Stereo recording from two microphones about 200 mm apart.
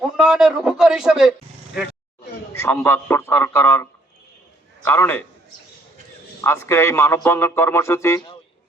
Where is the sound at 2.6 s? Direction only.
10° left (ahead or behind).